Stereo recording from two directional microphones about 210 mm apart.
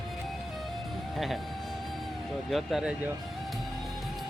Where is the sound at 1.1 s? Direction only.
Centre (ahead or behind).